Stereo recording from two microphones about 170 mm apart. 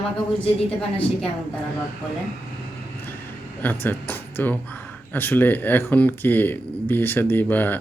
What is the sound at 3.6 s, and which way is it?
Speech, 10° left (ahead or behind).